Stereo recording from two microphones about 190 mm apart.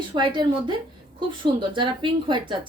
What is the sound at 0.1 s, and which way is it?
Speech, 25° right (ahead or behind).